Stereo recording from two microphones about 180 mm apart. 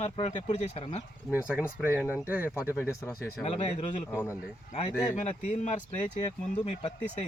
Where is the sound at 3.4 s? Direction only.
35° left (ahead or behind).